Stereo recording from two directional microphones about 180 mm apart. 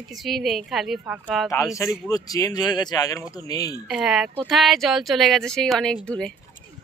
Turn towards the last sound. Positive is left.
turn(degrees=5)  # may be behind; listen again after turning